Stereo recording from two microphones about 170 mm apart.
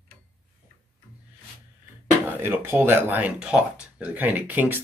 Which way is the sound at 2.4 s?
15° right (ahead or behind).